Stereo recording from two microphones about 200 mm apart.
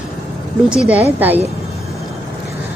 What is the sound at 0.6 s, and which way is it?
Speech, 5° right (ahead or behind).